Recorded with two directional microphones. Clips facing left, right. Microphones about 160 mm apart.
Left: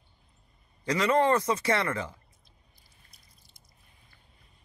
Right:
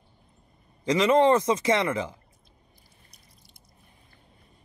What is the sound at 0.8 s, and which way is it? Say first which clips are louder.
A man's voice: right 5 dB; 20° right (ahead or behind).